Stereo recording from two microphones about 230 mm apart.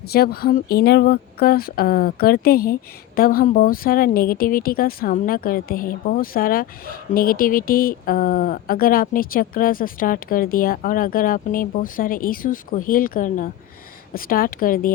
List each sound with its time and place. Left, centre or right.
0.1 s speech: left